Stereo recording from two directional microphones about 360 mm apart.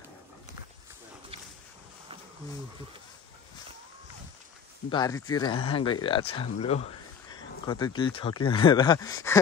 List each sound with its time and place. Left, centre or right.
4.8 s speech: centre